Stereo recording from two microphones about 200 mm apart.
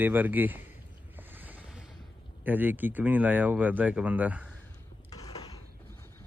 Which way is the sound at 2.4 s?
10° right (ahead or behind).